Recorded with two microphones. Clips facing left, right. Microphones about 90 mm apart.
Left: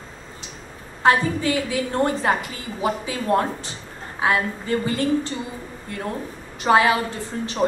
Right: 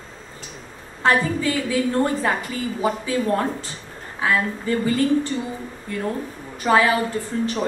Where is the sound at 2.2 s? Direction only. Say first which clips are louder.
Even; 20° left (ahead or behind).